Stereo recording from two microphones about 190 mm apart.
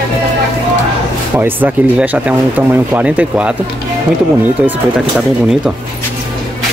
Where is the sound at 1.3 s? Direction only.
10° right (ahead or behind).